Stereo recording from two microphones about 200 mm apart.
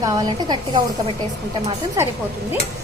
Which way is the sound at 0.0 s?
20° right (ahead or behind).